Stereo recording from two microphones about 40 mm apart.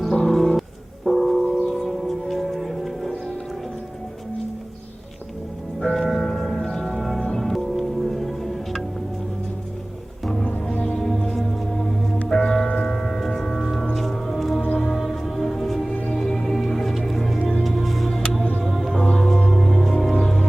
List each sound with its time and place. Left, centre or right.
0.2 s music: centre
1.0 s gong: centre
1.5 s music: centre
5.8 s music: centre
10.7 s music: centre
11.0 s music: centre
19.0 s music: left
19.5 s music: centre